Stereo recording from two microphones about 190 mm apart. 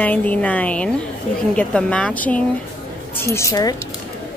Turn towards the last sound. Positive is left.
turn(degrees=15)  # may be behind; listen again after turning